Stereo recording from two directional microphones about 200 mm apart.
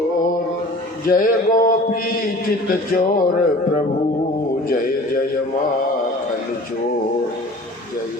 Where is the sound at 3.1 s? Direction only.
40° left (ahead or behind).